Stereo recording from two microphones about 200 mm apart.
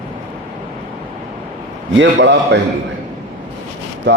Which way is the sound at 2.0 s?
65° right (ahead or behind).